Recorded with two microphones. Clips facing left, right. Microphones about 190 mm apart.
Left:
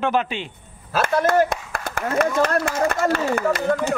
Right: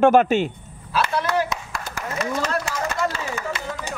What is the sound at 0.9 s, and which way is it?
Speech, 50° left (ahead or behind).